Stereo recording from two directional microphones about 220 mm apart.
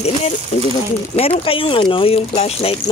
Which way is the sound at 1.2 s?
25° left (ahead or behind).